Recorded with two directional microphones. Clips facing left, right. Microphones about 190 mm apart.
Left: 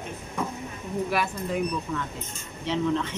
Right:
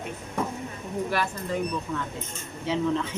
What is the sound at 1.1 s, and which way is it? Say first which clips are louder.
Speech: even; 5° left (ahead or behind).